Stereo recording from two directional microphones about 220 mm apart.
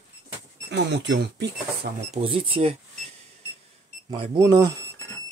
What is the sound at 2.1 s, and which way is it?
Speech, 25° right (ahead or behind).